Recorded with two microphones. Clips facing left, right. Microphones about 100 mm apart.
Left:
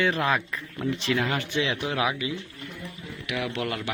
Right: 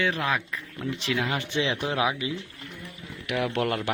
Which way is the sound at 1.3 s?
25° right (ahead or behind).